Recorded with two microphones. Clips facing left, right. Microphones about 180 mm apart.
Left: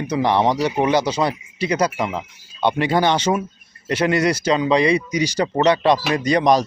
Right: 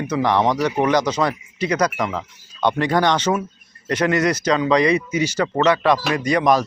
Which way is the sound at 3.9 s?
30° left (ahead or behind).